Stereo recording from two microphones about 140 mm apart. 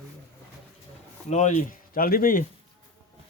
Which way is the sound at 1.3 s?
55° left (ahead or behind).